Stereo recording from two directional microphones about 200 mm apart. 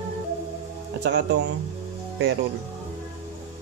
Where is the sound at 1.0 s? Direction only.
60° right (ahead or behind).